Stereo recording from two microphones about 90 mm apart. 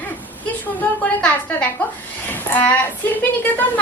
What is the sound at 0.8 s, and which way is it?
A woman's voice, 15° left (ahead or behind).